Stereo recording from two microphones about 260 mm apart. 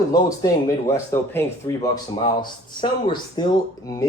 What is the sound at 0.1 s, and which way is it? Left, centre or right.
Speech, centre.